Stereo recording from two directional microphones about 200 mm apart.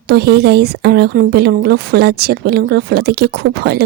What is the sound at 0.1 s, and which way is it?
Speech, 55° right (ahead or behind).